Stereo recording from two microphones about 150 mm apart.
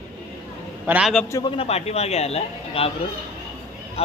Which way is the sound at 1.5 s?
40° left (ahead or behind).